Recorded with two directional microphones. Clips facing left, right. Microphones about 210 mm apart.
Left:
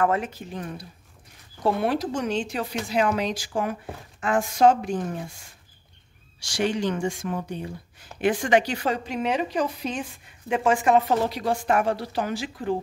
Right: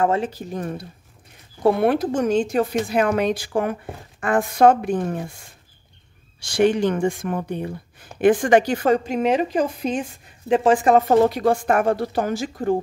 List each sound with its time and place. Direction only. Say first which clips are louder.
0.0 s speech: right 3 dB; 30° right (ahead or behind); by 0.8 s 45° right (ahead or behind)
1.6 s speech: right 6 dB; 60° right (ahead or behind)
6.4 s speech: right 7 dB; 55° right (ahead or behind)
10.5 s speech: right 5 dB; 35° right (ahead or behind)